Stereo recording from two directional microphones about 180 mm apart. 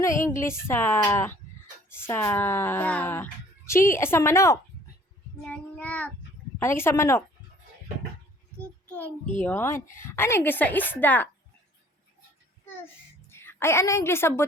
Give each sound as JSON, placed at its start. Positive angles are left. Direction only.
{"t": 0.3, "sound": "speech", "side_deg": 15}
{"t": 5.5, "sound": "child singing", "side_deg": 5}
{"t": 6.6, "sound": "speech", "side_deg": 15}
{"t": 9.4, "sound": "speech", "side_deg": 15}
{"t": 13.3, "sound": "a woman's voice", "side_deg": 15}